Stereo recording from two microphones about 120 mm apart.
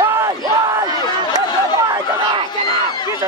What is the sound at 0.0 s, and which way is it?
Battle cry, 20° right (ahead or behind).